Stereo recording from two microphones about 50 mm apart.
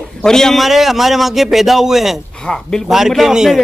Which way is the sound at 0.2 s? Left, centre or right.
Centre.